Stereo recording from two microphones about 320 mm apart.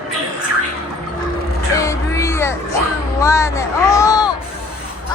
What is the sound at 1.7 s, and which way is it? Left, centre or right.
Music, centre.